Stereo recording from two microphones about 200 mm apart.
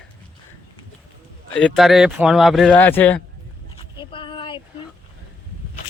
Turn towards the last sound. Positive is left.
turn(degrees=25)  # may be behind; listen again after turning